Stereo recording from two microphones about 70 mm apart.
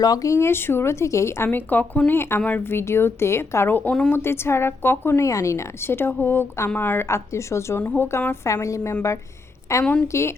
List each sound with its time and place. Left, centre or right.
0.0 s speech: left
0.3 s a woman's voice: left
1.5 s speech: left
2.0 s a woman's voice: left
3.7 s speech: left
4.1 s a woman's voice: left
7.8 s a woman's voice: left
8.6 s a woman's voice: left